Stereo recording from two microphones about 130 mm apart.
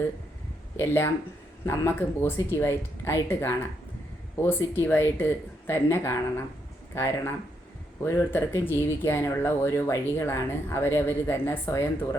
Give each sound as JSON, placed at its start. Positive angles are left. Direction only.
{"t": 0.8, "sound": "speech", "side_deg": 20}